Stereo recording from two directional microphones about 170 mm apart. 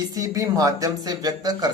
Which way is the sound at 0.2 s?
20° right (ahead or behind).